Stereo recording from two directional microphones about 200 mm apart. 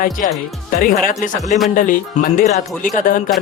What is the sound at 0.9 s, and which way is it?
Speech, 40° left (ahead or behind).